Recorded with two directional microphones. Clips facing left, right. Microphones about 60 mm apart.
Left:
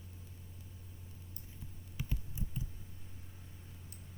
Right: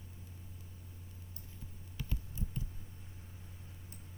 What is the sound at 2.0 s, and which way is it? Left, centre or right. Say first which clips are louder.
Computer keyboard: even; centre.